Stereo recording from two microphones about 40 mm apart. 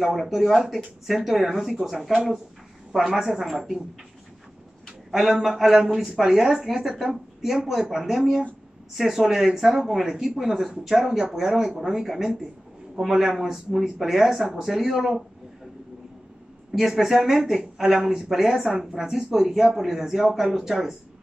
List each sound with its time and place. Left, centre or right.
0.0 s speech: centre
3.1 s speech: centre
5.1 s speech: centre
16.7 s speech: centre